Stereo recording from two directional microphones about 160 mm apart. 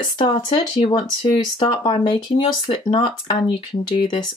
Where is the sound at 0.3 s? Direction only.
35° left (ahead or behind).